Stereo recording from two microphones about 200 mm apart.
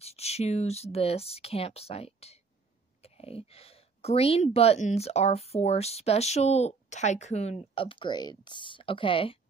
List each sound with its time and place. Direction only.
0.0 s a woman's voice: 30° left (ahead or behind)